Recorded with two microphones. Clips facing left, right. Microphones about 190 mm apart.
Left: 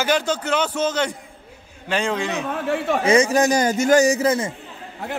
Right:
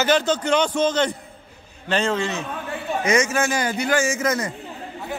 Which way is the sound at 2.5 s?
90° left.